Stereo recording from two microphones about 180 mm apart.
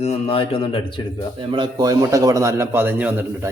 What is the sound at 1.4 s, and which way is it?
A man's voice, 25° right (ahead or behind).